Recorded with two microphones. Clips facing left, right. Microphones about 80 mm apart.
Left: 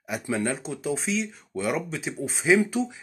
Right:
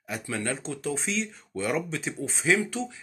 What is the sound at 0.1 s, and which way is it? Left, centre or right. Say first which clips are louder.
Speech: left 4 dB; centre.